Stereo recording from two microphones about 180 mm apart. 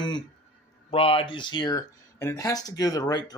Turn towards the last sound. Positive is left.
turn(degrees=20)  # may be behind; listen again after turning